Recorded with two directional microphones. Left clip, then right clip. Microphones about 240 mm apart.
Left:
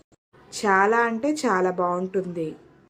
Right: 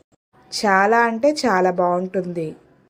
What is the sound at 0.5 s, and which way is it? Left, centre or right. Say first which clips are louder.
A woman's voice: right 4 dB; centre.